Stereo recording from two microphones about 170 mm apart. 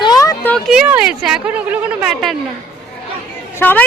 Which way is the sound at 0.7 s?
5° right (ahead or behind).